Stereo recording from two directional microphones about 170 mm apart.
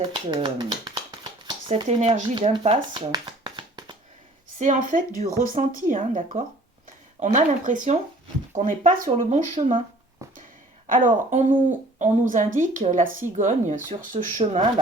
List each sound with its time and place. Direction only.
0.0 s speech: 30° right (ahead or behind)
2.3 s speech: 30° right (ahead or behind)
4.5 s speech: 45° right (ahead or behind)
10.2 s a sound: 20° right (ahead or behind)
10.8 s speech: 50° right (ahead or behind)